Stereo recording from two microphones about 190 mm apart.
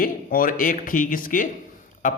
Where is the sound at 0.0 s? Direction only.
50° left (ahead or behind).